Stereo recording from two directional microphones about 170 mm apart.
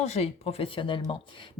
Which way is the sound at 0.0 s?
40° left (ahead or behind).